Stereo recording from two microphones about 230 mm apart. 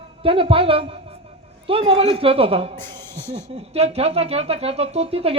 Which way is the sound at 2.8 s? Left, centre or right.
Centre.